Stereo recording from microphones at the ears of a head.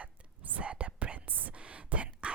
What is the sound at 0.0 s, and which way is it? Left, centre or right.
Whispering, right.